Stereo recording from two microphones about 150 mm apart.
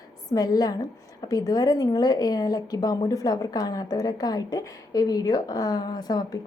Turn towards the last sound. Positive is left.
turn(degrees=25)  # may be behind; listen again after turning